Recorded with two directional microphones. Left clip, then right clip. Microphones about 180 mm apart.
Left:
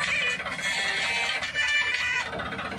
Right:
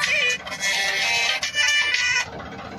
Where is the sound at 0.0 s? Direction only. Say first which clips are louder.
Right 5 dB; 55° right (ahead or behind).